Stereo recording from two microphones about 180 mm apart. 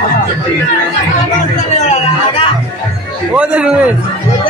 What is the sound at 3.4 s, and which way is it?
Speech, 5° right (ahead or behind).